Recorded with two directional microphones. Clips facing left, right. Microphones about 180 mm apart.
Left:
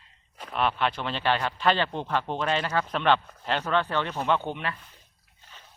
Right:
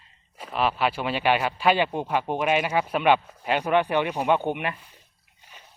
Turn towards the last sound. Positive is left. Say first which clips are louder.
# right 4 dB
turn(degrees=-15)  # may be behind; listen again after turning